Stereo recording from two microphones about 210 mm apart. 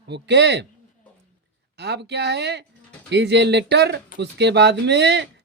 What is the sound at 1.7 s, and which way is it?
Speech, 50° right (ahead or behind).